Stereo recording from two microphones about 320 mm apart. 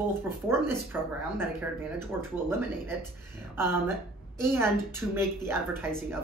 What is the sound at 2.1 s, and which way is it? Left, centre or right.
Speech, centre.